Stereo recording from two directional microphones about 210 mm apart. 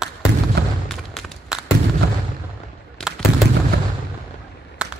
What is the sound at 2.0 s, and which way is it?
Artillery fire, 50° right (ahead or behind).